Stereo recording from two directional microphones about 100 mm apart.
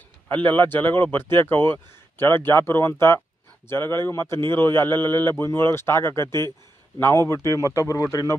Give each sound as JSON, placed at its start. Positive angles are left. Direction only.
{"t": 0.3, "sound": "a man's voice", "side_deg": 20}